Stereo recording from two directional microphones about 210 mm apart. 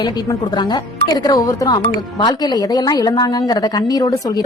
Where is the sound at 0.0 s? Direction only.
20° left (ahead or behind).